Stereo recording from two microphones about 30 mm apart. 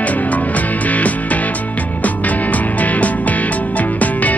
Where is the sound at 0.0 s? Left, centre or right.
Left.